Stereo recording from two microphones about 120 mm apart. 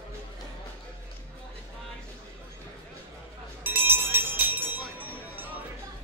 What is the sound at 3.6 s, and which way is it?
Music, 15° right (ahead or behind).